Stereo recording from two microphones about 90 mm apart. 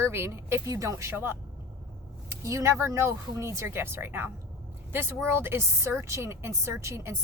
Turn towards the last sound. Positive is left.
turn(degrees=-30)  # may be behind; listen again after turning